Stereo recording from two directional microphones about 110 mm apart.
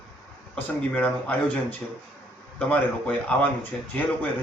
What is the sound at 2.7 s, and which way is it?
Speech, 10° left (ahead or behind).